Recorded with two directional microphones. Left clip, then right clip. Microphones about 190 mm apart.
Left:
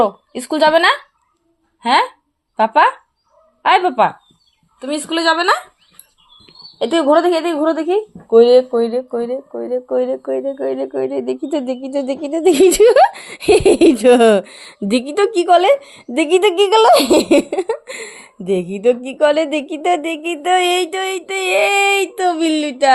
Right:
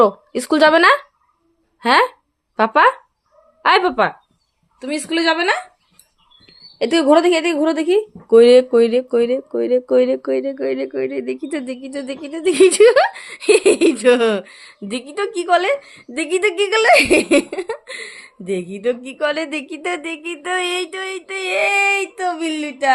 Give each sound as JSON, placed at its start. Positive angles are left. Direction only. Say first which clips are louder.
{"t": 0.0, "sound": "speech", "louder": "right 2 dB", "side_deg": -50}
{"t": 3.6, "sound": "a woman's voice", "louder": "left 2 dB", "side_deg": -25}
{"t": 4.8, "sound": "a woman's voice", "louder": "left 1 dB", "side_deg": -5}
{"t": 6.8, "sound": "a woman's voice", "louder": "even", "side_deg": -20}
{"t": 8.3, "sound": "speech", "louder": "even", "side_deg": -45}
{"t": 10.5, "sound": "speech", "louder": "left 1 dB", "side_deg": -20}
{"t": 11.1, "sound": "speech", "louder": "left 4 dB", "side_deg": 0}